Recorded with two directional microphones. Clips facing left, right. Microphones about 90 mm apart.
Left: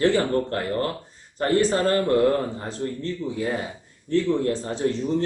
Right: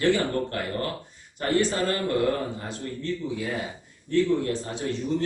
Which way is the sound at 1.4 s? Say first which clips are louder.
Left 4 dB; 35° left (ahead or behind).